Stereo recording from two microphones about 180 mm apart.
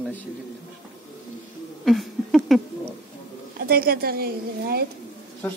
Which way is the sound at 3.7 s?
60° right (ahead or behind).